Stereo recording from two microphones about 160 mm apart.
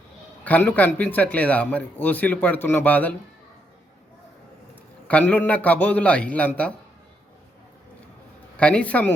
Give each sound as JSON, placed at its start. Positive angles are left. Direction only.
{"t": 0.4, "sound": "speech", "side_deg": 10}
{"t": 5.0, "sound": "speech", "side_deg": 10}
{"t": 8.5, "sound": "speech", "side_deg": 10}